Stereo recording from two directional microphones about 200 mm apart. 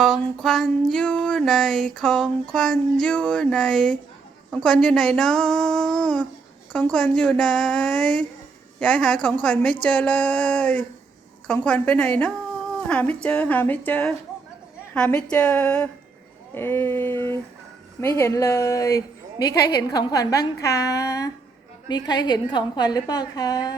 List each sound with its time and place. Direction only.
0.0 s music: centre (ahead or behind)
9.8 s a woman's voice: 5° left (ahead or behind)
14.9 s music: 5° left (ahead or behind)
16.6 s a woman's voice: 10° left (ahead or behind)